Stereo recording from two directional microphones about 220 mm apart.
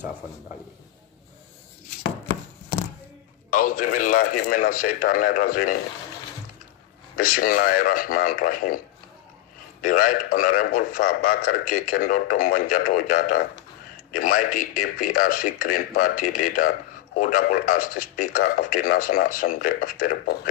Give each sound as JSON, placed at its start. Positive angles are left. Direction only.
{"t": 3.5, "sound": "a man's voice", "side_deg": 40}
{"t": 7.2, "sound": "a man's voice", "side_deg": 40}
{"t": 9.8, "sound": "a man's voice", "side_deg": 40}